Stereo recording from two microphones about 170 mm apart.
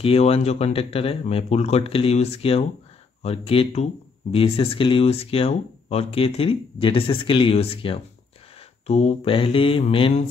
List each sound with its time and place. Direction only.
0.0 s speech: 35° left (ahead or behind)